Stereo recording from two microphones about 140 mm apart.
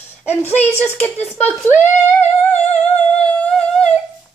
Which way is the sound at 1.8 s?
15° left (ahead or behind).